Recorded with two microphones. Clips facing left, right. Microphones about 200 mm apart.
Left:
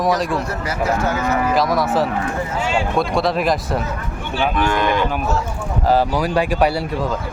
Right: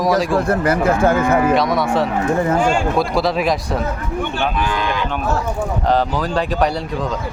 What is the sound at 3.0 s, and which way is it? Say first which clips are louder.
Speech: right 1 dB; centre (ahead or behind).